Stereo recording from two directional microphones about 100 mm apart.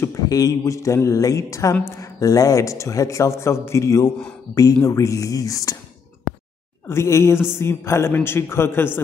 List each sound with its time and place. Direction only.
0.0 s speech: 35° left (ahead or behind)
6.9 s a man's voice: 30° left (ahead or behind)